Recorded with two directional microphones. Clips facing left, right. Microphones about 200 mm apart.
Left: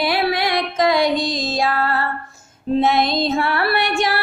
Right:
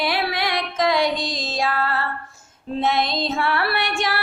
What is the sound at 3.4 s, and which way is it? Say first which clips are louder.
Music: left 3 dB; 50° left (ahead or behind).